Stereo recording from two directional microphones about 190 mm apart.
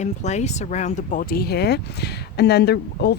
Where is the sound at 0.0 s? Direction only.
35° left (ahead or behind).